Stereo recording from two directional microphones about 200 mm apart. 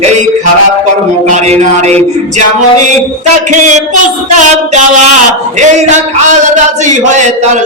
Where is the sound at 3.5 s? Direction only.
40° right (ahead or behind).